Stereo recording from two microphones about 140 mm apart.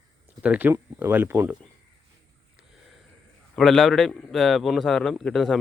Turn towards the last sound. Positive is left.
turn(degrees=0)  # may be behind; listen again after turning